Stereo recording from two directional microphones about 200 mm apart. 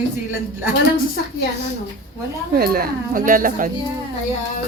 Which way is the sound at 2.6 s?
50° right (ahead or behind).